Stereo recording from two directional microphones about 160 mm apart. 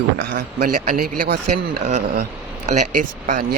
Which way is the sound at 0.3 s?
60° right (ahead or behind).